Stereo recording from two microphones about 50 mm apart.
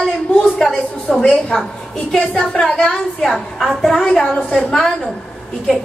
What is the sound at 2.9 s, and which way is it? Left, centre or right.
A woman's voice, centre.